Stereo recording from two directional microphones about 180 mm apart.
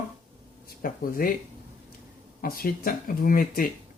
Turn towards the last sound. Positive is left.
turn(degrees=50)  # may be behind; listen again after turning